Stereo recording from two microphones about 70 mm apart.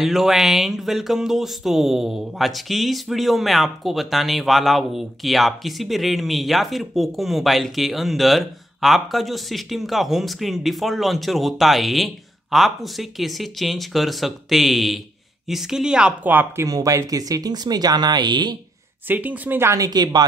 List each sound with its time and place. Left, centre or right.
0.0 s speech: centre
16.6 s speech: right
19.0 s speech: right
19.8 s a woman's voice: right